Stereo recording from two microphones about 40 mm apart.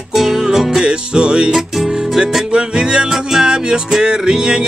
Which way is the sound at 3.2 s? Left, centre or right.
Centre.